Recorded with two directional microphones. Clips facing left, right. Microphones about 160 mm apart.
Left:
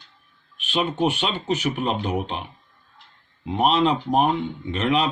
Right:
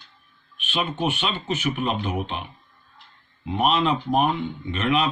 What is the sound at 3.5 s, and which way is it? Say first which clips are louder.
Speech: left 2 dB; 30° left (ahead or behind).